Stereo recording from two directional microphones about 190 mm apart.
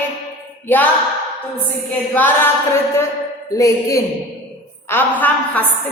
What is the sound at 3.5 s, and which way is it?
A woman's voice, 15° left (ahead or behind).